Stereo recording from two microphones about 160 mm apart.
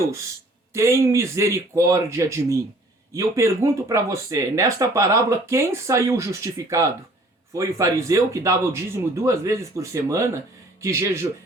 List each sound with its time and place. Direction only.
0.7 s speech: 15° right (ahead or behind)